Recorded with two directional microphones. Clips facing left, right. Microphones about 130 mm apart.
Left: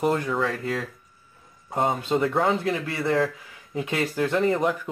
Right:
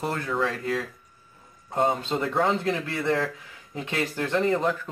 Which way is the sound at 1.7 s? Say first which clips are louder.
Left 1 dB; 10° left (ahead or behind).